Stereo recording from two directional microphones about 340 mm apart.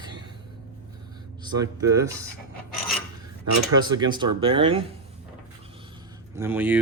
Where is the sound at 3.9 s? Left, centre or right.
Centre.